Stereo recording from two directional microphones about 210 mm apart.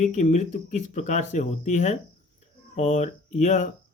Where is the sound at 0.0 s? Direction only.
35° left (ahead or behind).